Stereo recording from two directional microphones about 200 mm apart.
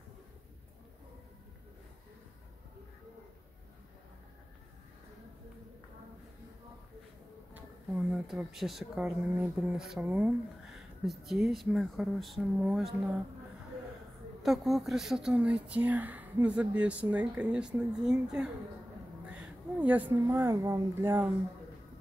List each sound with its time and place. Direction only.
7.5 s speech: 5° right (ahead or behind)
14.4 s a woman's voice: centre (ahead or behind)